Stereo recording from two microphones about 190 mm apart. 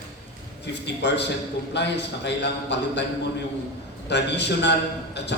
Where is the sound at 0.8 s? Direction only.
65° left (ahead or behind).